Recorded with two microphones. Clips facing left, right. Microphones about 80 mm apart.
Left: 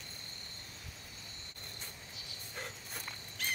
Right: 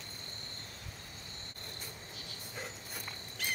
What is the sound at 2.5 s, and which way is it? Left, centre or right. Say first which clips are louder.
Dog: even; centre.